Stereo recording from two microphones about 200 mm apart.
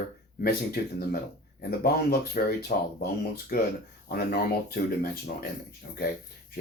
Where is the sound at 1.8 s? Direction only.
50° left (ahead or behind).